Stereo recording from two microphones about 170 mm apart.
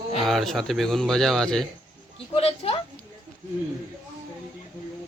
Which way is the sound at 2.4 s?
35° left (ahead or behind).